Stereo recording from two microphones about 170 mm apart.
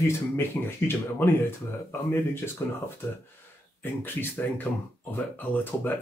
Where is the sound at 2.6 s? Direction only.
15° left (ahead or behind).